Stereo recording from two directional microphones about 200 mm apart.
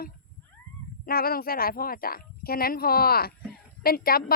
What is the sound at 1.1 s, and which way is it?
A woman's voice, 50° left (ahead or behind).